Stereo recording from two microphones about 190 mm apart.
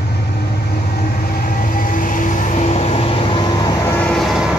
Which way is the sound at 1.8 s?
45° left (ahead or behind).